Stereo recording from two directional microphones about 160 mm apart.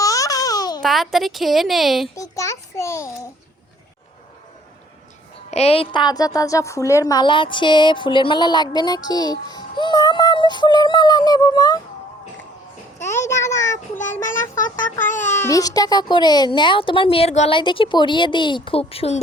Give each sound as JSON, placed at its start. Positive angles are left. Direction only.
{"t": 0.0, "sound": "a sound", "side_deg": 20}
{"t": 0.8, "sound": "a woman's voice", "side_deg": 0}
{"t": 2.1, "sound": "a woman's voice", "side_deg": 20}
{"t": 5.5, "sound": "a woman's voice", "side_deg": 40}
{"t": 13.0, "sound": "a sound", "side_deg": 15}
{"t": 13.3, "sound": "a child's voice", "side_deg": 20}
{"t": 13.7, "sound": "a child's voice", "side_deg": 50}
{"t": 15.3, "sound": "a child's voice", "side_deg": 15}